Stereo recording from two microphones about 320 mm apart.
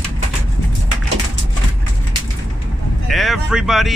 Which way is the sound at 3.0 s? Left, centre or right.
Centre.